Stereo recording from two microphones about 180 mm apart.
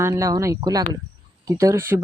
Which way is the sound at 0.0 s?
20° right (ahead or behind).